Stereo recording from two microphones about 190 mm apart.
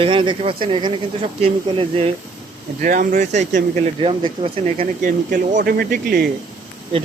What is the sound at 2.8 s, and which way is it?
Speech, 45° right (ahead or behind).